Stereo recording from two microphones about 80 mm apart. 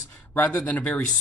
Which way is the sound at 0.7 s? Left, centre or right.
Centre.